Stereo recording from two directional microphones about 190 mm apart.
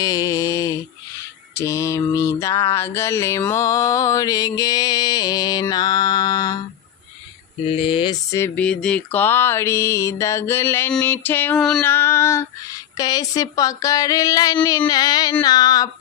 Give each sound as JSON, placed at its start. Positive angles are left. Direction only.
{"t": 0.0, "sound": "mantra", "side_deg": 20}
{"t": 7.7, "sound": "mantra", "side_deg": 30}